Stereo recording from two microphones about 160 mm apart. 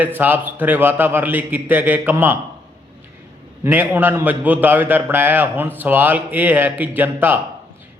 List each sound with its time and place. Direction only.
0.0 s a man's voice: 10° right (ahead or behind)
3.6 s a man's voice: 10° right (ahead or behind)